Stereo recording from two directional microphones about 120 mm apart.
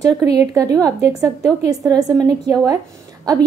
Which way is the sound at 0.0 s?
30° right (ahead or behind).